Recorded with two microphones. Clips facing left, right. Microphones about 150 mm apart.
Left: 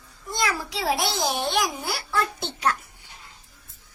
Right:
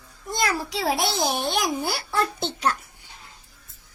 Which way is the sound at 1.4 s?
35° right (ahead or behind).